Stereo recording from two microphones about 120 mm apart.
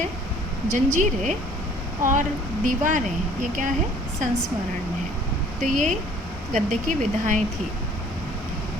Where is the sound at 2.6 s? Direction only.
90° right.